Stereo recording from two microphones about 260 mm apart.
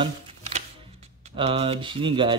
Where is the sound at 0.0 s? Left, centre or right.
Right.